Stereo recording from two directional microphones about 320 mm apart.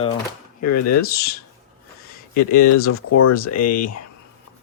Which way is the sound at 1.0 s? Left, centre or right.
Left.